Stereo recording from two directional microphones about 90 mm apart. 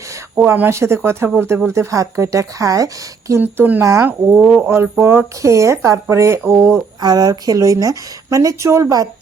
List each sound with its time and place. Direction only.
0.3 s speech: 25° right (ahead or behind)
3.4 s speech: 20° right (ahead or behind)
4.4 s speech: 10° right (ahead or behind)
4.7 s speech: 25° right (ahead or behind)
7.0 s speech: 50° right (ahead or behind)